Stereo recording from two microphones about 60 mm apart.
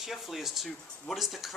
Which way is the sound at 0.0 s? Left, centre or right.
Centre.